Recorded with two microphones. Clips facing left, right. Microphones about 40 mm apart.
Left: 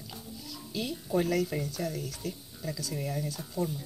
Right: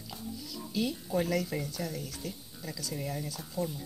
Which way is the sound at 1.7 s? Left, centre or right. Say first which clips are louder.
Left 3 dB; left.